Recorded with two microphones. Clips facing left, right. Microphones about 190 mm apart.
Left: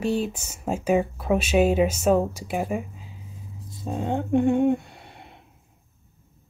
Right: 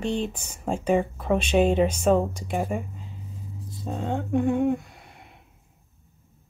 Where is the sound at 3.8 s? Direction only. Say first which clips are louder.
Left 2 dB; 15° left (ahead or behind); by 5.3 s 30° left (ahead or behind).